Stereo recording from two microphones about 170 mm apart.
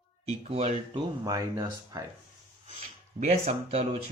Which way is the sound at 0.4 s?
40° right (ahead or behind).